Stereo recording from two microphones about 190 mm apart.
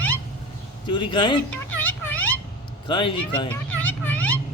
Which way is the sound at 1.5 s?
10° left (ahead or behind).